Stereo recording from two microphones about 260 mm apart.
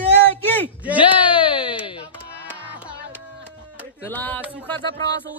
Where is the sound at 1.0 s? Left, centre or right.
Centre.